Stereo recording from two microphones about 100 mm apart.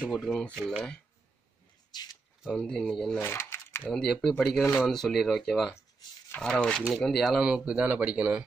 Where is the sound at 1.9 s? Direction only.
45° left (ahead or behind).